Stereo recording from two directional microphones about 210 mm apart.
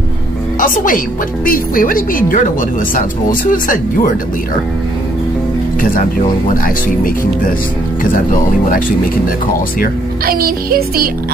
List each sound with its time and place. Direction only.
0.6 s a woman's voice: 40° left (ahead or behind)
6.5 s a woman's voice: 40° left (ahead or behind)
10.2 s music: 45° right (ahead or behind)